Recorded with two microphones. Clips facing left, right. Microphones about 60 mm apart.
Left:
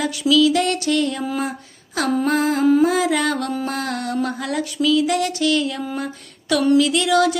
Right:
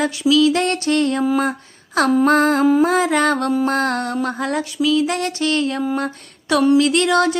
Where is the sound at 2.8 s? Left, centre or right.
Right.